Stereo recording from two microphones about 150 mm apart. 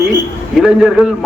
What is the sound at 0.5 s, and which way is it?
Speech, centre (ahead or behind).